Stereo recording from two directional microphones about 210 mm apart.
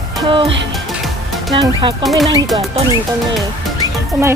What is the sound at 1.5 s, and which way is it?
Speech, 20° right (ahead or behind).